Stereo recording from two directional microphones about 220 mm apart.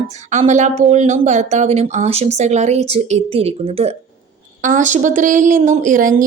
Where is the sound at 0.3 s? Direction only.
35° right (ahead or behind).